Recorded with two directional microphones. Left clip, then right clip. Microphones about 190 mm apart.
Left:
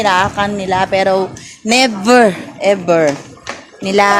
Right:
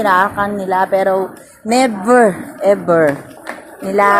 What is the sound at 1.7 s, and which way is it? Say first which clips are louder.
Speech: left 1 dB; 90° left.